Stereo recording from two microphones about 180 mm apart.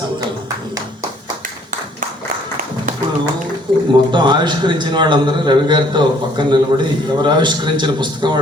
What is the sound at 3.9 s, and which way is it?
A man's voice, 25° right (ahead or behind).